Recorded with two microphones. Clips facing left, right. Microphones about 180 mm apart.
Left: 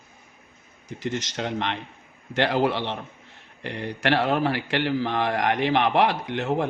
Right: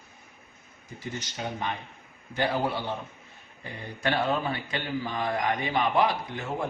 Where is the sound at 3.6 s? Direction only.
80° left.